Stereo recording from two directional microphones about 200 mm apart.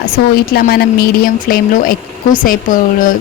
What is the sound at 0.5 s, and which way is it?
A woman's voice, 50° left (ahead or behind).